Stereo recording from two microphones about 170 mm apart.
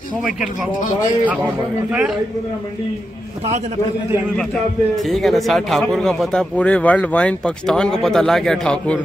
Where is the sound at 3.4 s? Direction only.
40° right (ahead or behind).